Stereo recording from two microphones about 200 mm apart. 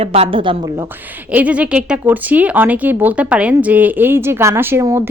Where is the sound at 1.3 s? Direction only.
5° right (ahead or behind).